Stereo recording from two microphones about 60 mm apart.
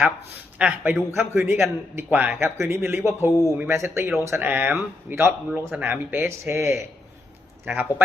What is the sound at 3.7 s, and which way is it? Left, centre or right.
Speech, right.